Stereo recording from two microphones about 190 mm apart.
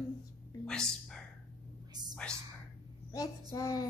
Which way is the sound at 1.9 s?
20° right (ahead or behind).